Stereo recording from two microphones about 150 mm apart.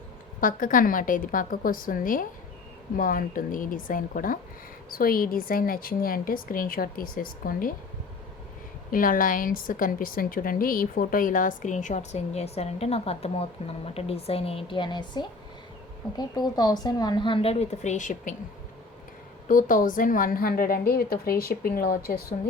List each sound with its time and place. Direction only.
0.3 s a woman's voice: 65° left (ahead or behind)
8.9 s a woman's voice: 70° left (ahead or behind)
19.5 s a woman's voice: 65° left (ahead or behind); by 22.4 s 90° left